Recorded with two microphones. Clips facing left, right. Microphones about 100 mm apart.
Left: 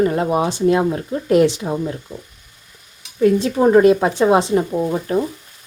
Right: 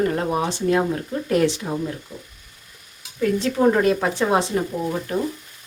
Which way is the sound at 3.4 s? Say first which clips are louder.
Left 4 dB; 20° left (ahead or behind).